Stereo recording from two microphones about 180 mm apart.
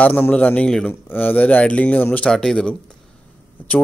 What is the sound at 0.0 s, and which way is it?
Speech, 5° left (ahead or behind).